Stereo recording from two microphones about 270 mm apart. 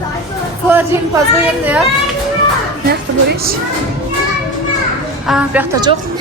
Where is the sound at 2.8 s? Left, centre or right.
Right.